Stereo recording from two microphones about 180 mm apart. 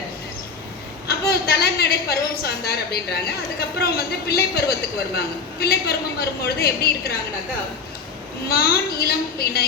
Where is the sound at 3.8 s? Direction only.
60° left (ahead or behind).